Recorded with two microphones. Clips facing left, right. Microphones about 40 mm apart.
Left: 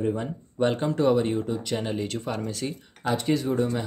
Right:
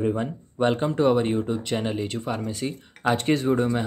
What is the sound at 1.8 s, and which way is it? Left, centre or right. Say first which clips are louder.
Speech: right 2 dB; centre.